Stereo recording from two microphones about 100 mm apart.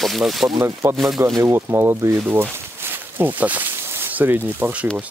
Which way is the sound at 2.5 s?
20° right (ahead or behind).